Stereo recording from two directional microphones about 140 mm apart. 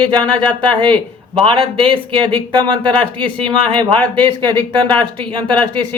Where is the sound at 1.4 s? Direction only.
40° right (ahead or behind).